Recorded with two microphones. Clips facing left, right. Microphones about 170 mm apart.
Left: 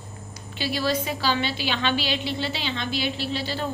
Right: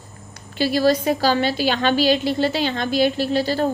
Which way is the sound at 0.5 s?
45° right (ahead or behind).